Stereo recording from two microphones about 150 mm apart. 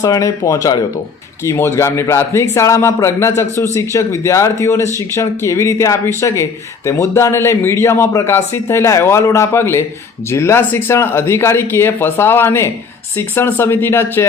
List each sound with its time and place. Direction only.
0.0 s speech: 20° left (ahead or behind)